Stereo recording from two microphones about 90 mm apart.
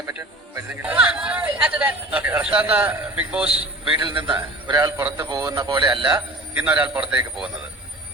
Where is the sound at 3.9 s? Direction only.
65° right (ahead or behind).